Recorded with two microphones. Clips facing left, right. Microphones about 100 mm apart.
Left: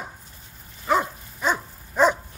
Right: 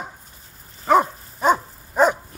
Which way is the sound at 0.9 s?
45° right (ahead or behind).